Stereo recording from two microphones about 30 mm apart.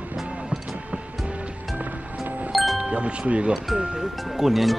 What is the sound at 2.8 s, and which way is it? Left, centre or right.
Speech, right.